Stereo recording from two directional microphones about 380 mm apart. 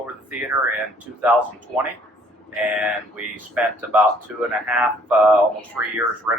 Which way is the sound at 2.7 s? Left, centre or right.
Centre.